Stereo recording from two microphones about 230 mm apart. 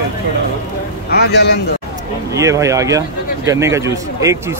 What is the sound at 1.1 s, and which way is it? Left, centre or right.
Speech, left.